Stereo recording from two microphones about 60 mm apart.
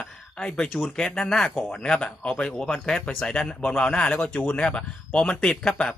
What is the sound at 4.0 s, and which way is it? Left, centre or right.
A man's voice, left.